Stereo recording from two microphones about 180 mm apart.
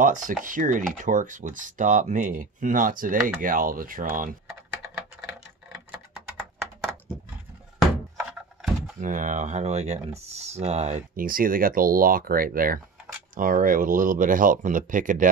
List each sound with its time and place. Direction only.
0.0 s speech: 45° right (ahead or behind)
5.7 s typing: 5° right (ahead or behind)
8.3 s a sound: 5° right (ahead or behind)
9.0 s speech: 45° right (ahead or behind)